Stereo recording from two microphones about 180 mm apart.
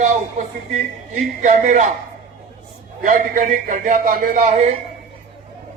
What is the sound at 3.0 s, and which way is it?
A man's voice, 45° right (ahead or behind).